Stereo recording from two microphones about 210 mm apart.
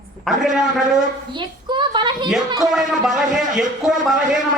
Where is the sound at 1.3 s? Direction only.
20° right (ahead or behind).